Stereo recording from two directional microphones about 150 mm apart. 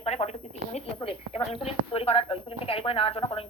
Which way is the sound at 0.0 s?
45° left (ahead or behind).